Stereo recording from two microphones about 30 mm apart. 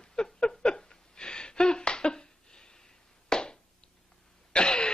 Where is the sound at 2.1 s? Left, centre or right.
Left.